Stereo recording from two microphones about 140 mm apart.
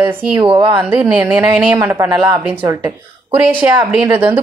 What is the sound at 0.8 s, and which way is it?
A woman's voice, 15° right (ahead or behind).